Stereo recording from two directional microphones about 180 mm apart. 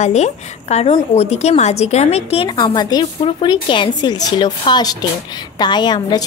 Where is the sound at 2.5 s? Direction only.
25° left (ahead or behind).